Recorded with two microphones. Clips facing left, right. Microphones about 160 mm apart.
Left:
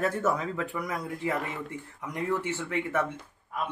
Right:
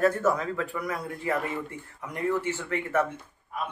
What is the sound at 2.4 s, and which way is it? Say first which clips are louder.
Speech: even; 15° left (ahead or behind).